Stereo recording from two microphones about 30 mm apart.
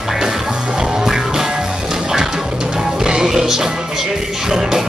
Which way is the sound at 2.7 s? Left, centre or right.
Right.